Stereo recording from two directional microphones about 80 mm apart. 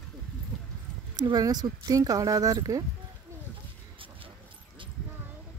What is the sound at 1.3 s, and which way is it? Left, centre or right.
Speech, right.